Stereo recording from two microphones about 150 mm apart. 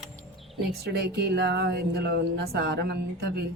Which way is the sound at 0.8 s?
90° right.